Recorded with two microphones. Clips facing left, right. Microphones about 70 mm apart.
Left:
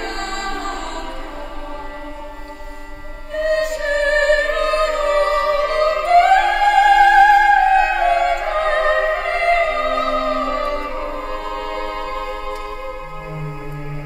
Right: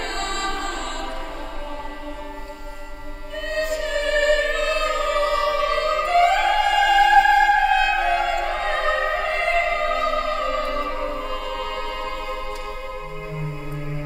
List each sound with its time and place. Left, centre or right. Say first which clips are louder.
0.0 s music: left 2 dB; left
3.3 s music: left 6 dB; left
11.0 s music: left 2 dB; left